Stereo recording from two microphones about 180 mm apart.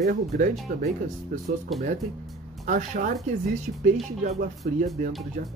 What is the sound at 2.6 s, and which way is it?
Speech, 45° right (ahead or behind).